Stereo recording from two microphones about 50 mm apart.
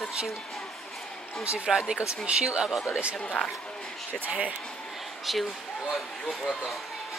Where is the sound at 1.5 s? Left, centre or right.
Centre.